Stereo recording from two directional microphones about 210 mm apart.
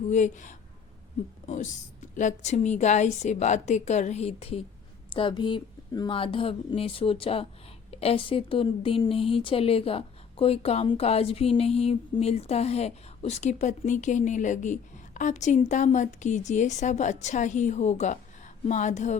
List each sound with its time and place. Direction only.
0.1 s a woman's voice: 35° left (ahead or behind)